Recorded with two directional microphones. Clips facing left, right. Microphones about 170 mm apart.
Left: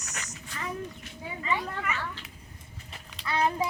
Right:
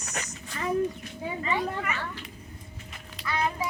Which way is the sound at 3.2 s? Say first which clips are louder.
Left 2 dB; 35° left (ahead or behind).